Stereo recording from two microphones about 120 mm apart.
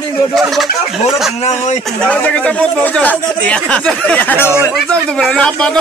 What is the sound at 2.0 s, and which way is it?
Speech, 10° left (ahead or behind).